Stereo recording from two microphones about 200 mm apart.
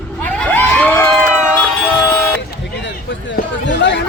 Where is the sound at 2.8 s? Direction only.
65° left (ahead or behind).